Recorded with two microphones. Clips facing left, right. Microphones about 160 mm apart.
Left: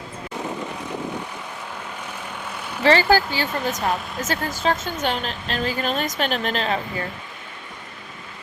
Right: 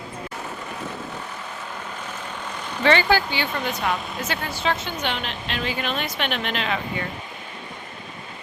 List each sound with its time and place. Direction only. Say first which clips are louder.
2.6 s vehicle: even; 10° left (ahead or behind)
2.8 s speech: left 2 dB; 35° left (ahead or behind)